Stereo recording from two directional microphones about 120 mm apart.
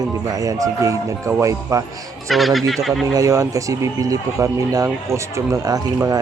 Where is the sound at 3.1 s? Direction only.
25° right (ahead or behind).